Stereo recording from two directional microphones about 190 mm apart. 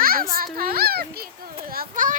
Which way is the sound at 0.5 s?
50° right (ahead or behind).